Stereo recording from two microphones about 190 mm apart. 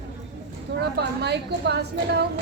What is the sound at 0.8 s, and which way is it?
Speech, 60° right (ahead or behind).